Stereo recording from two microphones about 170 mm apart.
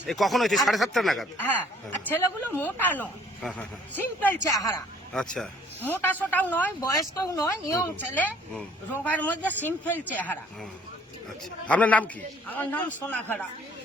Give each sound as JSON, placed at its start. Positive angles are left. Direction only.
{"t": 0.0, "sound": "speech", "side_deg": 0}
{"t": 11.7, "sound": "speech", "side_deg": 10}